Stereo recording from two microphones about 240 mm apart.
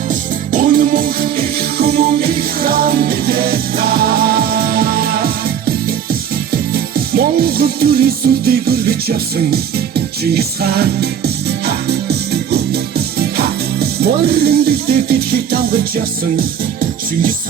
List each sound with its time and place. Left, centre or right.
0.1 s music: right
6.5 s music: right
13.1 s speech: right